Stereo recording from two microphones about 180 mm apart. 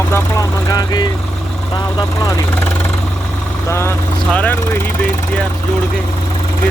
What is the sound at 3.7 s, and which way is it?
Speech, 15° left (ahead or behind).